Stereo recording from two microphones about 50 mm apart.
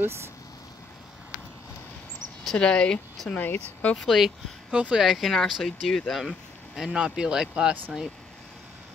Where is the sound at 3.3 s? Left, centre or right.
Left.